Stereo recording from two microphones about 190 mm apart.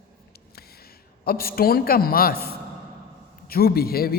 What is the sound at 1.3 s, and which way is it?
A man's voice, 50° left (ahead or behind).